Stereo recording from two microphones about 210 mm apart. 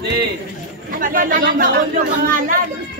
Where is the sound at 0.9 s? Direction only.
40° right (ahead or behind).